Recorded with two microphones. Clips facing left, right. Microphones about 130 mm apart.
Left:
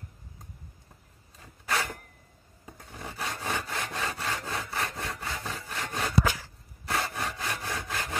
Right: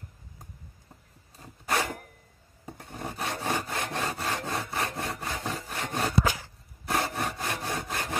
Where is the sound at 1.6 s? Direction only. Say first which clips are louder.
Right 2 dB; 25° right (ahead or behind).